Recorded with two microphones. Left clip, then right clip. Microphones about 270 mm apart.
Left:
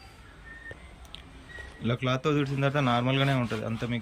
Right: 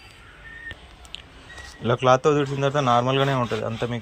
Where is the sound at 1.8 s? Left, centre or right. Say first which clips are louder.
Right 11 dB; centre.